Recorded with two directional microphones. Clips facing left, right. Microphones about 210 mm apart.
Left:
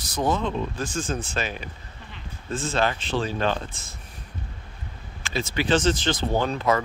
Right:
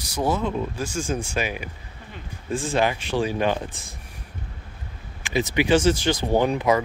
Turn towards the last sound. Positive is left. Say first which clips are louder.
# right 3 dB
turn(degrees=-15)  # may be behind; listen again after turning